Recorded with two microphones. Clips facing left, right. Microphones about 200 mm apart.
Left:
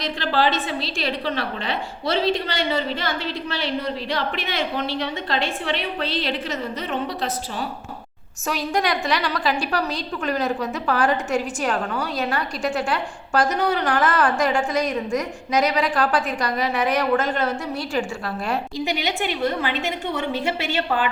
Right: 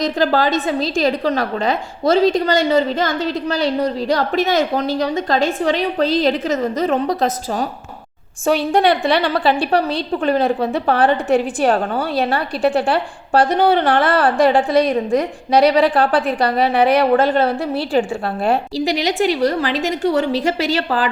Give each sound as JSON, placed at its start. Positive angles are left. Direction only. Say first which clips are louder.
{"t": 0.0, "sound": "a woman's voice", "louder": "right 6 dB", "side_deg": -45}
{"t": 8.4, "sound": "a woman's voice", "louder": "right 8 dB", "side_deg": -30}
{"t": 19.4, "sound": "a woman's voice", "louder": "right 6 dB", "side_deg": -80}
{"t": 19.6, "sound": "a woman's voice", "louder": "right 7 dB", "side_deg": -40}